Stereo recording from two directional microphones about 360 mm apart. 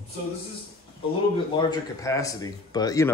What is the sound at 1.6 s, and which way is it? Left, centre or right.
A man's voice, centre.